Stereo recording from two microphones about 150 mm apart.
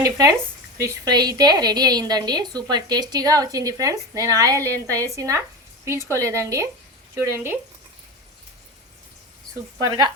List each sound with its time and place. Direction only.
0.0 s a woman's voice: 25° right (ahead or behind)
7.2 s speech: 15° right (ahead or behind)
9.8 s a woman's voice: 25° right (ahead or behind)